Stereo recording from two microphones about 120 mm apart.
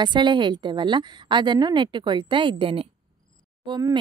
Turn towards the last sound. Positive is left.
turn(degrees=-40)  # may be behind; listen again after turning